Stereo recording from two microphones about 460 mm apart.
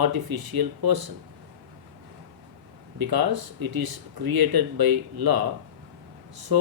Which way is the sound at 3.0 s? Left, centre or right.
Right.